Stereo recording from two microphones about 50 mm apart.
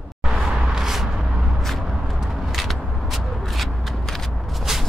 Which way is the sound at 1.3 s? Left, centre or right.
Centre.